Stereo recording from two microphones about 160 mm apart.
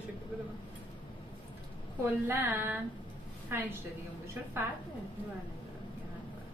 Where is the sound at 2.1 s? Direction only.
10° right (ahead or behind).